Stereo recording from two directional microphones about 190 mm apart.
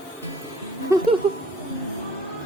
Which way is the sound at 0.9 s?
15° right (ahead or behind).